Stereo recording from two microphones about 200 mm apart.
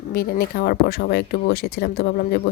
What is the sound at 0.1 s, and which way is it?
Speech, 50° left (ahead or behind).